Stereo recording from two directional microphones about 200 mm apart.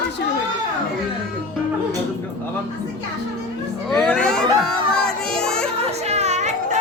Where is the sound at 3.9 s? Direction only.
5° left (ahead or behind).